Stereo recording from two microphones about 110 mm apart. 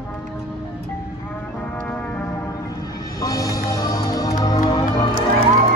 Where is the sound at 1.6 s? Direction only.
15° left (ahead or behind).